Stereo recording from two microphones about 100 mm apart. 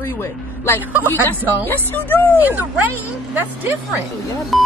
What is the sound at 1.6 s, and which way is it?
Speech, 20° left (ahead or behind).